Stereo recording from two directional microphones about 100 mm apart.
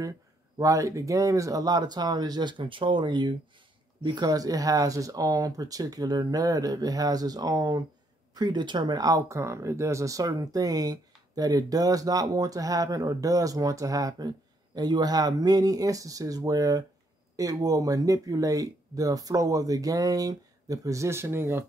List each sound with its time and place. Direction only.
0.6 s speech: 35° right (ahead or behind)